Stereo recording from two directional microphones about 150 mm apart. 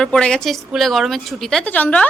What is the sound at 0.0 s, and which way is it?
A woman's voice, 5° left (ahead or behind).